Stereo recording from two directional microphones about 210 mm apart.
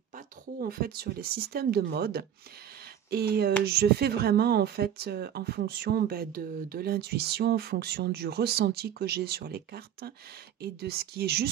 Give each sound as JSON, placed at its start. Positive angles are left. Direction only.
{"t": 0.1, "sound": "speech", "side_deg": -45}